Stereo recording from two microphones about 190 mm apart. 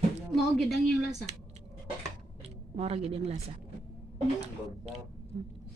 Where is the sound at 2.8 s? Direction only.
30° right (ahead or behind).